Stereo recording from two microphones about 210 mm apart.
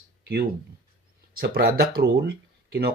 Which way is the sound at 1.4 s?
45° right (ahead or behind).